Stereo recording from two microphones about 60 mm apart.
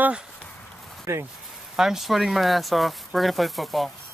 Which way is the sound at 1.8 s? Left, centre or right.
Centre.